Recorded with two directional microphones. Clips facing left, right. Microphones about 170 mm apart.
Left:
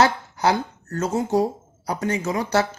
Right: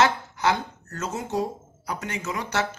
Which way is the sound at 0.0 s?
35° left (ahead or behind).